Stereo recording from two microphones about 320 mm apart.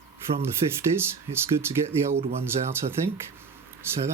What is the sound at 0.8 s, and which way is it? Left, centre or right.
Speech, centre.